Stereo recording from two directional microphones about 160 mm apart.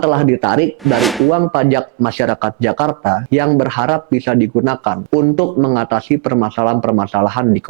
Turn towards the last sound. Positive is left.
turn(degrees=-20)  # may be behind; listen again after turning